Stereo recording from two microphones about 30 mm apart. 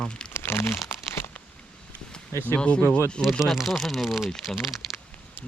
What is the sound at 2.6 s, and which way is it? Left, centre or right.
Speech, left.